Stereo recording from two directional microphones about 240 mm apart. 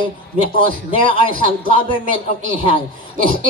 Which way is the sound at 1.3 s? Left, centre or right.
Right.